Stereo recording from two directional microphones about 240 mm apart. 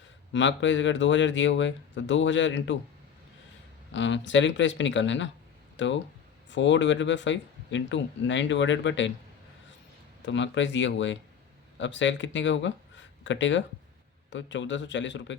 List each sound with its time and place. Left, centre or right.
0.3 s speech: left
3.9 s speech: left
10.2 s speech: left